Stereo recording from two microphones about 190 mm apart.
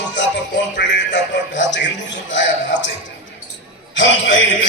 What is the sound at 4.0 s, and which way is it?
Speech, 75° left (ahead or behind).